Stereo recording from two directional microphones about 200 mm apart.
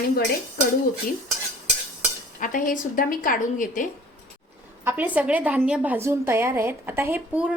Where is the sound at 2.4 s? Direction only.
40° left (ahead or behind).